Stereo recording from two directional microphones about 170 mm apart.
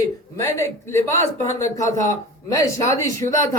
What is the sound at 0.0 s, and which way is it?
Speech, 15° left (ahead or behind).